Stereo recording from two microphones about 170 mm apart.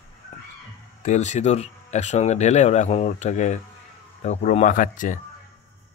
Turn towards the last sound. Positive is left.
turn(degrees=50)  # may be behind; listen again after turning